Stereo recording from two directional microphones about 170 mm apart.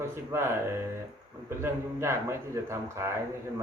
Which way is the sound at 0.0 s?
15° right (ahead or behind).